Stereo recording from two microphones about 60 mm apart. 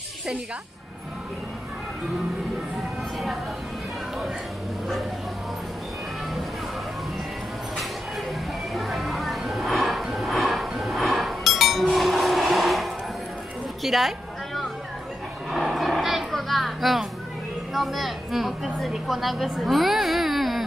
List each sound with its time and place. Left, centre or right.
8.7 s music: centre
17.7 s a woman's voice: centre